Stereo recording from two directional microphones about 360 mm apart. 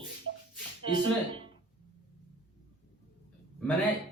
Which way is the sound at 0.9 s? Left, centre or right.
Centre.